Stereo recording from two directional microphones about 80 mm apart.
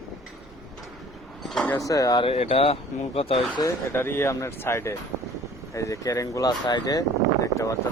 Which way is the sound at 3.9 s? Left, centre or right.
Left.